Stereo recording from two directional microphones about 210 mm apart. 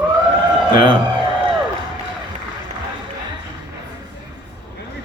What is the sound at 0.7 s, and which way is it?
Speech, 25° right (ahead or behind).